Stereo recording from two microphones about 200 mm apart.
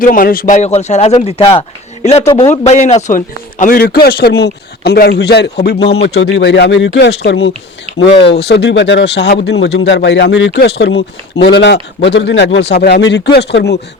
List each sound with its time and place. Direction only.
0.0 s a man's voice: 45° left (ahead or behind); by 2.5 s 25° left (ahead or behind)
2.5 s a man's voice: 35° left (ahead or behind); by 5.9 s 55° left (ahead or behind)
6.0 s speech: 70° left (ahead or behind)